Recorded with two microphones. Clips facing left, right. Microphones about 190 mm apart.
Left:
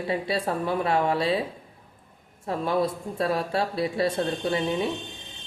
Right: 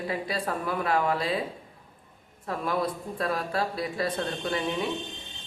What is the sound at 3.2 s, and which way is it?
Speech, 30° left (ahead or behind).